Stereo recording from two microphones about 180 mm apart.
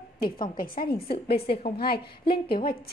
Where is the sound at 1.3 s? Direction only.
30° left (ahead or behind).